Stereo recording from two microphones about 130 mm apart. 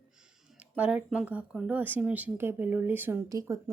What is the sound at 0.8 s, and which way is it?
A woman's voice, 10° right (ahead or behind).